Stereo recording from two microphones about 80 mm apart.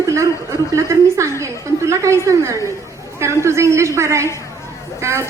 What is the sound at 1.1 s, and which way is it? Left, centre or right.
A woman's voice, right.